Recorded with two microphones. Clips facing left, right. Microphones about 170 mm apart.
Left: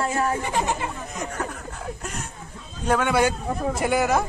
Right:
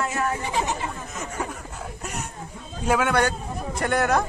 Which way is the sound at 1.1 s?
5° right (ahead or behind).